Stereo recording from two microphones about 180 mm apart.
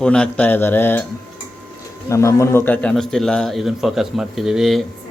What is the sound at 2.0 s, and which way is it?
A man's voice, 15° left (ahead or behind).